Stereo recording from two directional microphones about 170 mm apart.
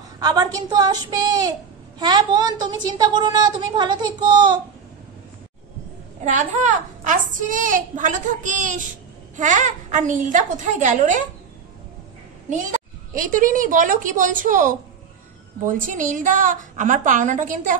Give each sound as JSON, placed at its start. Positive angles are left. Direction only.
{"t": 0.2, "sound": "a woman's voice", "side_deg": -25}
{"t": 6.2, "sound": "a woman's voice", "side_deg": -45}
{"t": 13.1, "sound": "a woman's voice", "side_deg": -55}